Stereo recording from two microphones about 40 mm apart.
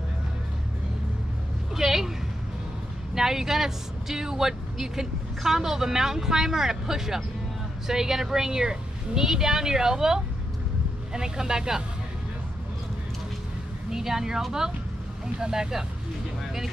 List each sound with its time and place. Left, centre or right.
1.8 s a woman's voice: centre
3.2 s speech: centre
13.9 s speech: centre